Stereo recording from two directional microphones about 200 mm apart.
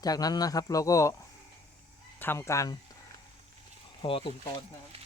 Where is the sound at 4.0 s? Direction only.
25° left (ahead or behind).